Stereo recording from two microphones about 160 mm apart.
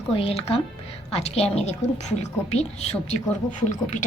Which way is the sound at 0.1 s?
35° left (ahead or behind).